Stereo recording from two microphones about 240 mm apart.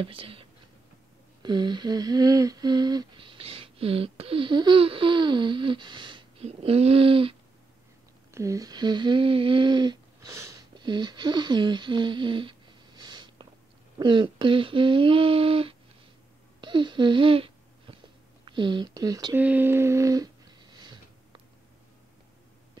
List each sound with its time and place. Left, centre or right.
0.0 s speech: right
1.4 s humming: centre
16.6 s babbling: centre
18.4 s a sound: centre